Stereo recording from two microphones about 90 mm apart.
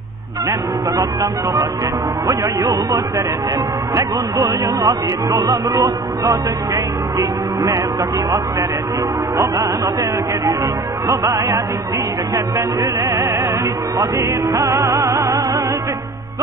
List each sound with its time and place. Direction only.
0.5 s speech: 35° right (ahead or behind)
11.1 s speech: 35° right (ahead or behind)
13.9 s music: 35° right (ahead or behind)